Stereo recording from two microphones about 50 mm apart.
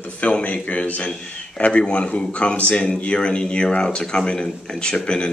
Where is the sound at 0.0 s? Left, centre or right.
Left.